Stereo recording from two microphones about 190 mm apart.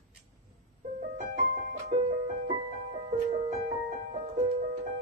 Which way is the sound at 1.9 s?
30° right (ahead or behind).